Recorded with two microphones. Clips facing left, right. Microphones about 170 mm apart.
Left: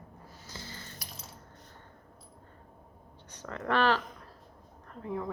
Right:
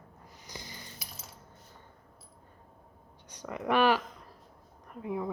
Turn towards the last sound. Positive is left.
turn(degrees=-10)  # may be behind; listen again after turning